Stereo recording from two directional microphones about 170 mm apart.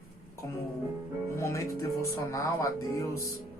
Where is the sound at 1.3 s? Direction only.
15° left (ahead or behind).